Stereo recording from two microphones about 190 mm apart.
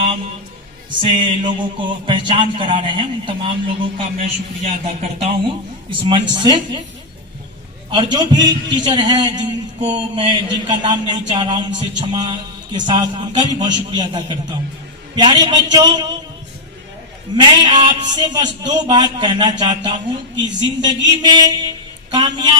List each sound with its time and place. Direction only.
1.0 s a man's voice: 25° right (ahead or behind)
7.9 s a man's voice: 25° right (ahead or behind)
17.3 s a man's voice: 25° right (ahead or behind)